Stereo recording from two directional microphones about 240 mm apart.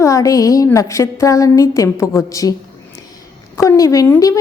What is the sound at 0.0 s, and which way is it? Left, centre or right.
A woman's voice, centre.